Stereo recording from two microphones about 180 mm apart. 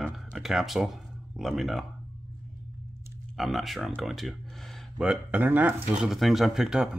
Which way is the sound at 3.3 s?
Centre (ahead or behind).